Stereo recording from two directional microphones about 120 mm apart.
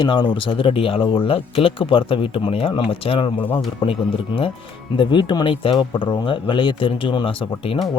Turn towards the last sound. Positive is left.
turn(degrees=50)  # may be behind; listen again after turning